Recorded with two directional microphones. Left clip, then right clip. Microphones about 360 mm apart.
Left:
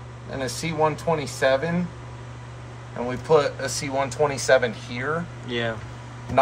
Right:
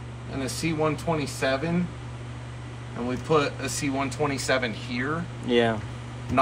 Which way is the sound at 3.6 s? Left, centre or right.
Left.